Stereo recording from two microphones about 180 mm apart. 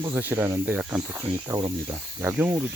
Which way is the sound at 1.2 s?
20° right (ahead or behind).